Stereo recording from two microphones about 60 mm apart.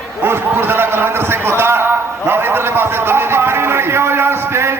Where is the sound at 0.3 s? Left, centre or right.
Right.